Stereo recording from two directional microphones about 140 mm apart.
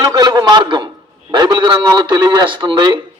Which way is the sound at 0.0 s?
30° right (ahead or behind).